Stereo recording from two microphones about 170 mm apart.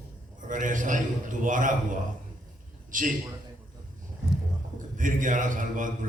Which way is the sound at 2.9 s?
50° right (ahead or behind).